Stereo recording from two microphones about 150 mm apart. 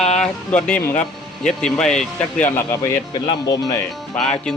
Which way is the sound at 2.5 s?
20° left (ahead or behind).